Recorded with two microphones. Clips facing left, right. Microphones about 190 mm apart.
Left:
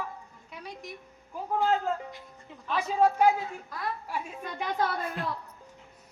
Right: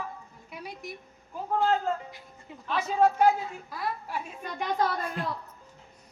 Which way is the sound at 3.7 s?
Centre (ahead or behind).